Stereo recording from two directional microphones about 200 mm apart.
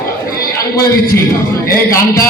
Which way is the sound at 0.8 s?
50° left (ahead or behind).